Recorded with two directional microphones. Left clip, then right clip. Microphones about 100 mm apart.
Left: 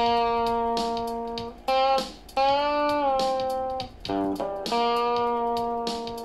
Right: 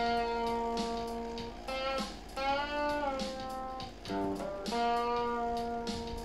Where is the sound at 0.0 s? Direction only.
45° left (ahead or behind).